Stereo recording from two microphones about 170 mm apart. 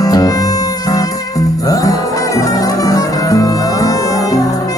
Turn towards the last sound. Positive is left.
turn(degrees=20)  # may be behind; listen again after turning